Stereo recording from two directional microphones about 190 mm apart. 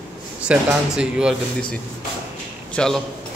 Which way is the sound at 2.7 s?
5° left (ahead or behind).